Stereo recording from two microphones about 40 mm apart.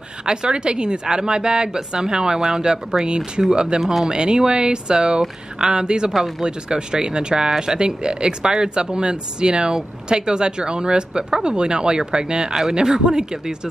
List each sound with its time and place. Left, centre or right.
0.3 s speech: right
3.8 s speech: centre
4.1 s speech: centre